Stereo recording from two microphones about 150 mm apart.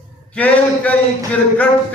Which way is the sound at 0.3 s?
10° left (ahead or behind).